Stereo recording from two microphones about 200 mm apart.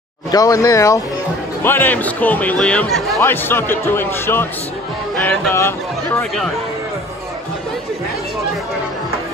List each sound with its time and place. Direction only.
0.3 s speech: 15° left (ahead or behind)